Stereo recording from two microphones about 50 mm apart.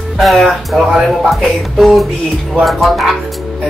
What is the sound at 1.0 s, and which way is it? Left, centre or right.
Speech, centre.